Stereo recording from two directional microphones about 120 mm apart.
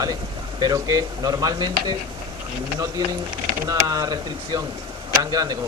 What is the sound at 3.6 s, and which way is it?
Speech, 30° right (ahead or behind).